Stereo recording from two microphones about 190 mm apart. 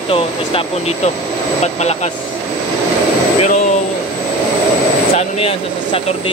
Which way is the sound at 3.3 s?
40° left (ahead or behind).